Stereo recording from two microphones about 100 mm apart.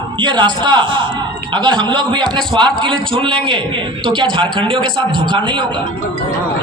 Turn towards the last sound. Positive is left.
turn(degrees=-50)  # may be behind; listen again after turning